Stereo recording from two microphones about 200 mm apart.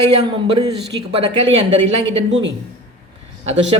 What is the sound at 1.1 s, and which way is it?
A man's voice, 30° right (ahead or behind).